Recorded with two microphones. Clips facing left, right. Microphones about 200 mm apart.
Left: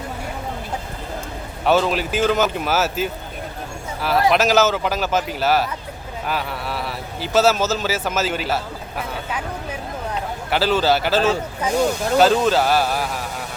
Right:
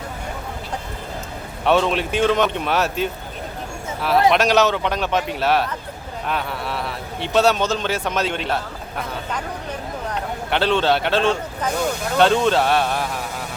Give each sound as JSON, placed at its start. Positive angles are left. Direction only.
{"t": 1.6, "sound": "speech", "side_deg": 0}
{"t": 4.3, "sound": "a man's voice", "side_deg": 0}